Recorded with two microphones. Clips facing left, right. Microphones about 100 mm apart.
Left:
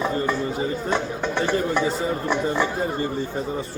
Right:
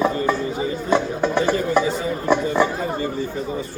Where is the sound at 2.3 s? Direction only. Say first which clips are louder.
Right 6 dB; 15° right (ahead or behind).